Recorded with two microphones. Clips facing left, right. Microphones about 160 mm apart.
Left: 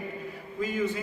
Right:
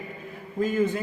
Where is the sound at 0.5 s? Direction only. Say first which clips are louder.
Right 5 dB; 50° right (ahead or behind).